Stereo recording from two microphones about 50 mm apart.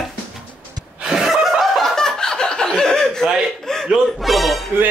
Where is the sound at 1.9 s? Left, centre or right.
Centre.